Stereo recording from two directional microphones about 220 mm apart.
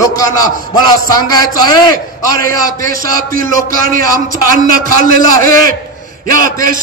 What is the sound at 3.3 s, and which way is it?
A man's voice, 40° right (ahead or behind).